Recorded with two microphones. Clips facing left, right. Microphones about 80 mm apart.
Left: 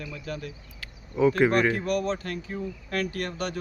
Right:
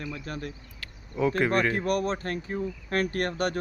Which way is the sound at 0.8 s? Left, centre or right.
Centre.